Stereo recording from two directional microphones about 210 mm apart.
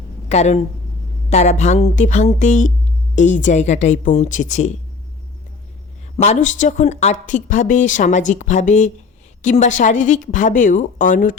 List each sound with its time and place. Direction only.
0.3 s speech: 30° left (ahead or behind)
6.2 s speech: 35° left (ahead or behind)